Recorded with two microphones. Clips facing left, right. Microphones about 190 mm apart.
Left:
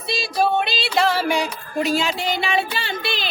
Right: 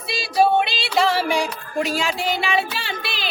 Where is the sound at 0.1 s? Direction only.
5° right (ahead or behind).